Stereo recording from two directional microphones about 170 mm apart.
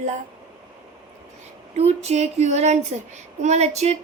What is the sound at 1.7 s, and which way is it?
A woman's voice, 40° right (ahead or behind).